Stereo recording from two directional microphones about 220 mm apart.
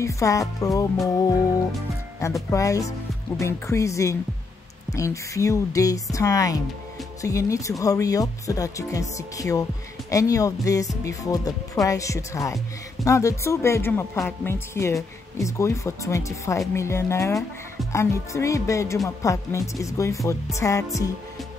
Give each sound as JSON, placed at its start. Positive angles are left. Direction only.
{"t": 0.0, "sound": "speech", "side_deg": 15}
{"t": 2.2, "sound": "speech", "side_deg": 15}